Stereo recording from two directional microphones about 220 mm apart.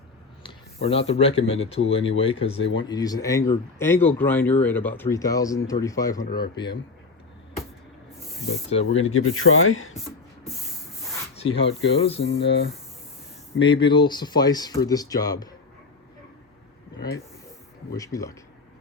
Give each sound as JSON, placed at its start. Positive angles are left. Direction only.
{"t": 0.4, "sound": "speech", "side_deg": 25}
{"t": 8.7, "sound": "speech", "side_deg": 30}
{"t": 9.0, "sound": "speech", "side_deg": 70}
{"t": 11.4, "sound": "speech", "side_deg": 25}
{"t": 12.2, "sound": "speech", "side_deg": 55}
{"t": 13.8, "sound": "speech", "side_deg": 20}
{"t": 17.9, "sound": "speech", "side_deg": 15}